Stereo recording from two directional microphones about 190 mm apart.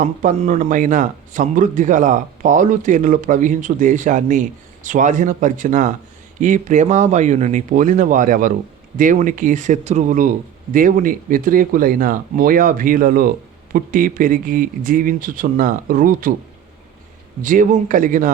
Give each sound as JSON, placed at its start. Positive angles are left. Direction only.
{"t": 0.0, "sound": "a man's voice", "side_deg": -40}
{"t": 17.4, "sound": "speech", "side_deg": -45}